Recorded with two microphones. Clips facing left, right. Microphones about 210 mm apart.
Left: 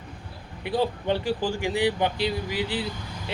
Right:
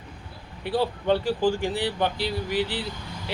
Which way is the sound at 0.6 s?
15° left (ahead or behind).